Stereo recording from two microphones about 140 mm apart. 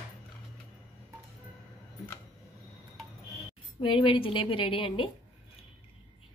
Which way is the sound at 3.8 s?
40° left (ahead or behind).